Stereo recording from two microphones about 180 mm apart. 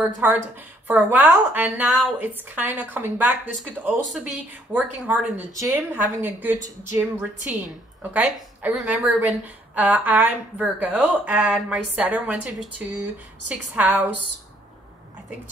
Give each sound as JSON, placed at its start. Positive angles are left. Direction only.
{"t": 0.2, "sound": "a woman's voice", "side_deg": -10}